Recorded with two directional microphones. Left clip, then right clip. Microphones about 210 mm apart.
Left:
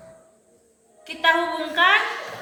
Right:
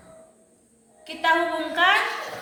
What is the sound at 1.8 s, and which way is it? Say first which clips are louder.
Speech: left 2 dB; centre (ahead or behind).